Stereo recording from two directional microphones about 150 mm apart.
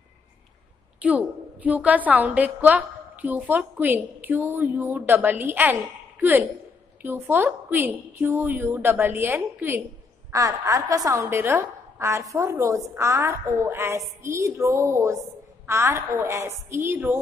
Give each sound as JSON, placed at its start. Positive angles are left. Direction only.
{"t": 1.0, "sound": "a woman's voice", "side_deg": -10}